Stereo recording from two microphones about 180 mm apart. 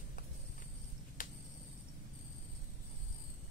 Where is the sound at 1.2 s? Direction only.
45° left (ahead or behind).